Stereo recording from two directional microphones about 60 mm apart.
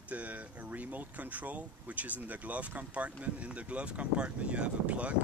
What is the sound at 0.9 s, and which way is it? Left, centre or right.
Speech, right.